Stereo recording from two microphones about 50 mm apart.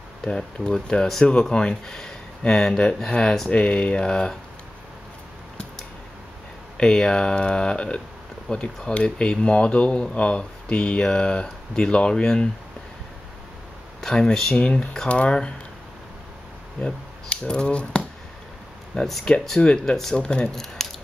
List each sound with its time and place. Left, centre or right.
0.2 s speech: centre
6.8 s speech: centre
14.0 s speech: centre
16.8 s speech: centre
18.9 s speech: centre
19.6 s speech: centre